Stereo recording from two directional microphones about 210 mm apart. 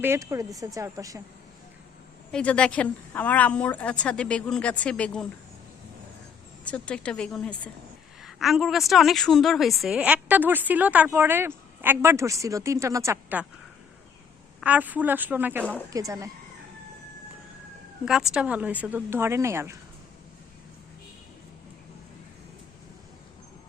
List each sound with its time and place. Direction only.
0.0 s a woman's voice: 10° right (ahead or behind)
2.3 s a woman's voice: 5° left (ahead or behind)
6.7 s a woman's voice: 5° left (ahead or behind); by 13.4 s 15° right (ahead or behind)
14.6 s a woman's voice: 5° right (ahead or behind)
18.0 s a woman's voice: centre (ahead or behind)